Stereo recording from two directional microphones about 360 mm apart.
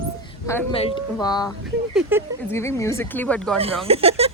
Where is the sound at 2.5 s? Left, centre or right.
Centre.